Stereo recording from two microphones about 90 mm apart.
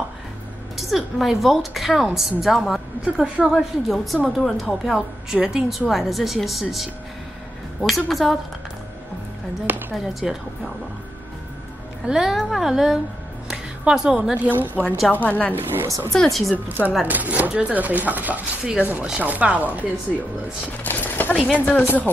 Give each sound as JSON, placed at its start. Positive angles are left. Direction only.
{"t": 0.7, "sound": "a woman's voice", "side_deg": 0}
{"t": 3.5, "sound": "a woman's voice", "side_deg": 0}
{"t": 7.9, "sound": "a woman's voice", "side_deg": 0}
{"t": 9.7, "sound": "a sound", "side_deg": -20}
{"t": 10.2, "sound": "a woman's voice", "side_deg": -5}
{"t": 12.1, "sound": "a woman's voice", "side_deg": -5}
{"t": 14.7, "sound": "speech", "side_deg": 20}
{"t": 15.5, "sound": "speech", "side_deg": -25}
{"t": 16.1, "sound": "a woman's voice", "side_deg": 5}
{"t": 16.5, "sound": "speech", "side_deg": -20}
{"t": 20.8, "sound": "a sound", "side_deg": 20}
{"t": 21.5, "sound": "speech", "side_deg": 20}